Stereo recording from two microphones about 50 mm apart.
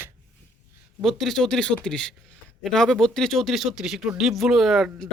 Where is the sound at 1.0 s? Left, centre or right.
Centre.